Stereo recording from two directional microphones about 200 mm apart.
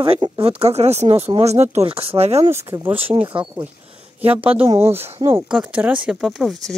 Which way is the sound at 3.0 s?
25° right (ahead or behind).